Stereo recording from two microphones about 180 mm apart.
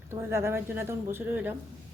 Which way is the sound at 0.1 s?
15° right (ahead or behind).